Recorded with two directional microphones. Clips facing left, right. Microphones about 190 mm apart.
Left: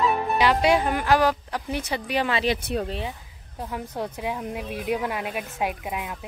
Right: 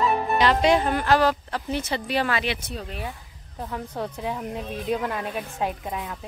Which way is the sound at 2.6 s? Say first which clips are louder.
Left 8 dB; 60° left (ahead or behind).